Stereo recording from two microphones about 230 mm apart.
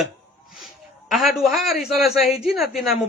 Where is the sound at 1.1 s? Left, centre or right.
Centre.